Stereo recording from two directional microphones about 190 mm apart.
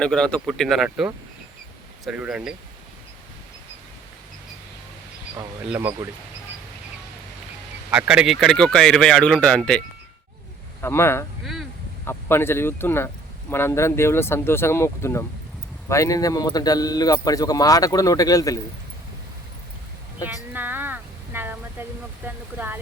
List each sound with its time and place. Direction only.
0.0 s speech: 5° left (ahead or behind)
5.6 s speech: 10° right (ahead or behind)
7.9 s speech: 5° right (ahead or behind)
10.8 s a man's voice: 15° left (ahead or behind)
20.5 s a sound: 10° right (ahead or behind)
22.5 s speech: 10° right (ahead or behind)